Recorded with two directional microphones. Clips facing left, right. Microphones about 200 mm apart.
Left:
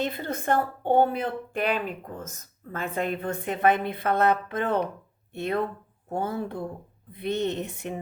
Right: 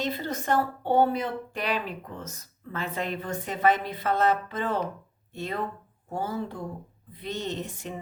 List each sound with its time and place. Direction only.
0.0 s a woman's voice: 55° left (ahead or behind)